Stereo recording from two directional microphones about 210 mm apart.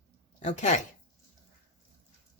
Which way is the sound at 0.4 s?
35° left (ahead or behind).